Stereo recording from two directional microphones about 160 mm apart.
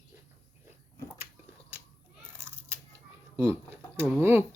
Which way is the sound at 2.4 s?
15° right (ahead or behind).